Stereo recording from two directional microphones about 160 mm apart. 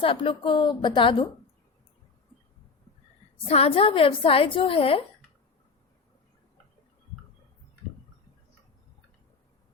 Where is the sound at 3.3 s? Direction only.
40° left (ahead or behind).